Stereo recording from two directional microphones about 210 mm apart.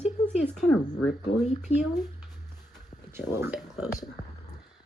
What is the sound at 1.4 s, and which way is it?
Speech, 35° left (ahead or behind).